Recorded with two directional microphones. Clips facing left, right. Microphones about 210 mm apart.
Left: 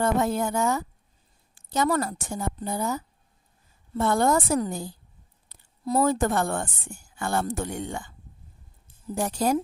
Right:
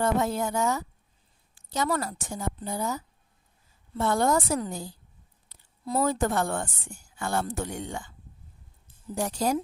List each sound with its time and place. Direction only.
0.0 s a woman's voice: 55° left (ahead or behind)
9.1 s a woman's voice: 55° left (ahead or behind)